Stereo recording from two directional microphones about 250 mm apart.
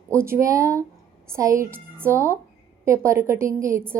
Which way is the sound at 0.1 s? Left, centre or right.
Centre.